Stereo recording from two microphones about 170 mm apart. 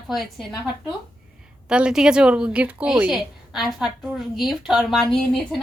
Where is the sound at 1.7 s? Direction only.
5° right (ahead or behind).